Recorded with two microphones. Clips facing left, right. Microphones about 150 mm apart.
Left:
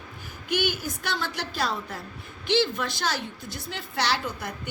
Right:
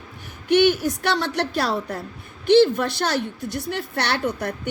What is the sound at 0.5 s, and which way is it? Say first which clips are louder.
A woman's voice: right 10 dB; 70° right (ahead or behind).